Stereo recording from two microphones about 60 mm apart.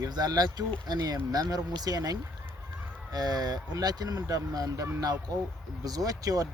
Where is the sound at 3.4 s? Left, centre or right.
Right.